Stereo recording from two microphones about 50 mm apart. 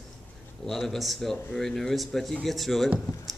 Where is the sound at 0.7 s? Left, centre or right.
Centre.